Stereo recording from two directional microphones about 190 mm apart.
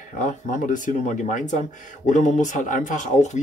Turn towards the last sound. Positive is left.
turn(degrees=40)  # may be behind; listen again after turning